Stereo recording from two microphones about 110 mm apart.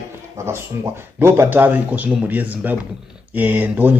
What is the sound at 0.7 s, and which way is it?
Speech, 25° right (ahead or behind).